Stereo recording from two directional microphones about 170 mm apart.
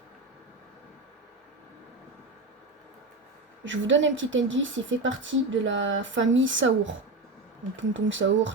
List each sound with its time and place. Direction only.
3.6 s speech: 90° right